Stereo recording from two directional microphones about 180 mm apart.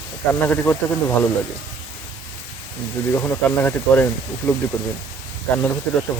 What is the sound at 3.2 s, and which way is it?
Speech, 10° left (ahead or behind).